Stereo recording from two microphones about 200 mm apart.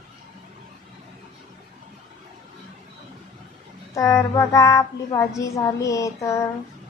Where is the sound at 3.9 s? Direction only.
15° left (ahead or behind).